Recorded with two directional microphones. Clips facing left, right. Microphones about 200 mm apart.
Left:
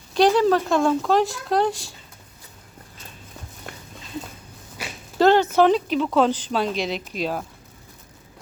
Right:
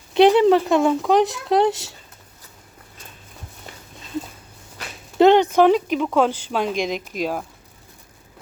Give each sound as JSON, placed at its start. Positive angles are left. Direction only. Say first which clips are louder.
{"t": 0.1, "sound": "speech", "louder": "right 4 dB", "side_deg": -20}
{"t": 5.2, "sound": "speech", "louder": "right 3 dB", "side_deg": -15}